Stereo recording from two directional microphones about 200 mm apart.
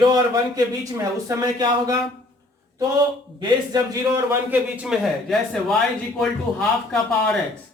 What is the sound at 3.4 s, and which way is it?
A man's voice, 20° right (ahead or behind).